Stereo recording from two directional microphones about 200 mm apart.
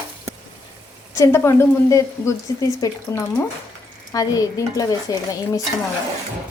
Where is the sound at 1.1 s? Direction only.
15° left (ahead or behind).